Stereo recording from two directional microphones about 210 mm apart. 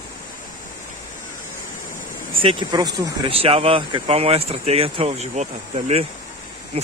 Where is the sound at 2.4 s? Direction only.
25° right (ahead or behind).